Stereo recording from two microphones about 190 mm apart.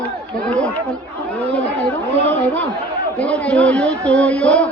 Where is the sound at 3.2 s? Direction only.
5° left (ahead or behind).